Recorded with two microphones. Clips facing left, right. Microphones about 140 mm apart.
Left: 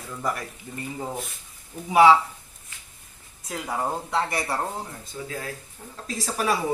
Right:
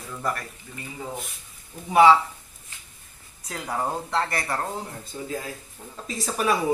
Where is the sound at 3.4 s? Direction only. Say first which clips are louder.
Even; 5° left (ahead or behind).